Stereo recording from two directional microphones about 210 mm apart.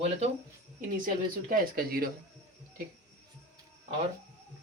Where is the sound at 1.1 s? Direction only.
45° right (ahead or behind).